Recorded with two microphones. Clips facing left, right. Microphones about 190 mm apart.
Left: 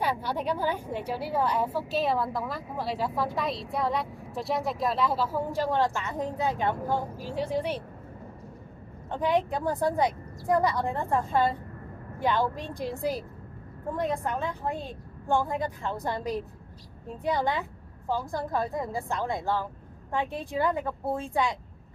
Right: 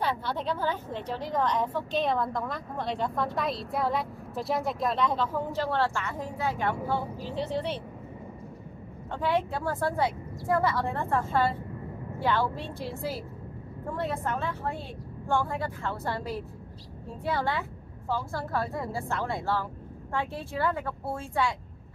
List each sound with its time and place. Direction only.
0.0 s a woman's voice: 10° left (ahead or behind)
9.1 s a woman's voice: 15° left (ahead or behind)